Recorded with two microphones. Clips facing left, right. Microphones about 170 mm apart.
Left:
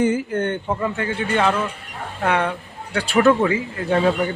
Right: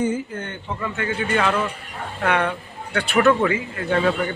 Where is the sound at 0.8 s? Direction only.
30° left (ahead or behind).